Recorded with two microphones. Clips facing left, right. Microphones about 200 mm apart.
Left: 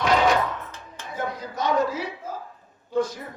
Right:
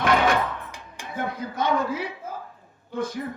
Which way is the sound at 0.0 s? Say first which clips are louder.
Left 1 dB; 55° right (ahead or behind).